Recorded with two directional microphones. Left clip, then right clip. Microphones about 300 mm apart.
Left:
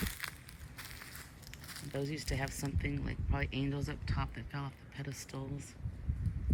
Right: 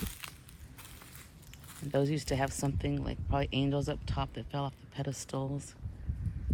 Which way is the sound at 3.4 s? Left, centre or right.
Centre.